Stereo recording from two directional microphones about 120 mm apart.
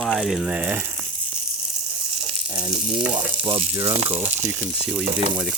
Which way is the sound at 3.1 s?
50° right (ahead or behind).